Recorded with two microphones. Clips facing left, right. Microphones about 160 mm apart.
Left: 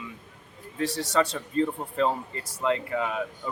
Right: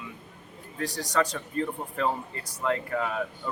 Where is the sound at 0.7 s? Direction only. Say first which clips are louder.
Left 2 dB; 30° left (ahead or behind).